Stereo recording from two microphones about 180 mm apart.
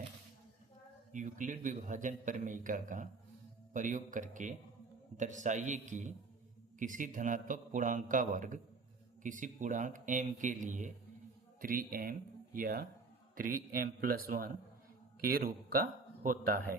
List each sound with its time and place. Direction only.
1.1 s a man's voice: 45° right (ahead or behind)
16.2 s a man's voice: 50° right (ahead or behind)